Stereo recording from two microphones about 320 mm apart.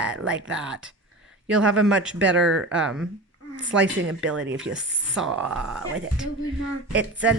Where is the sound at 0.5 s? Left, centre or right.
Centre.